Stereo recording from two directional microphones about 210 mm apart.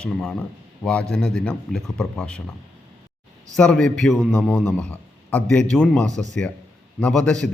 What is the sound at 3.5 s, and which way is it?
A man's voice, 5° left (ahead or behind).